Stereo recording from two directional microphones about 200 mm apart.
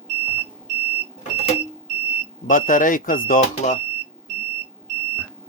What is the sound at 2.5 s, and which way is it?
Speech, 40° left (ahead or behind).